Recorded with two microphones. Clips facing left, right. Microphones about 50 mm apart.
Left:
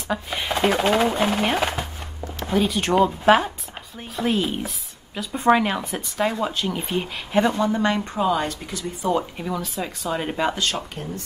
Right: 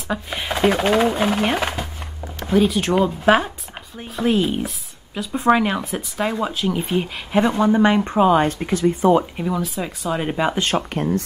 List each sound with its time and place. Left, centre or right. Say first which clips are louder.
0.1 s speech: right 1 dB; centre
7.5 s speech: right 5 dB; centre; by 9.1 s right
9.4 s speech: right 4 dB; centre